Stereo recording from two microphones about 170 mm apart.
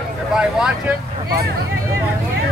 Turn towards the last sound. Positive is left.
turn(degrees=-5)  # may be behind; listen again after turning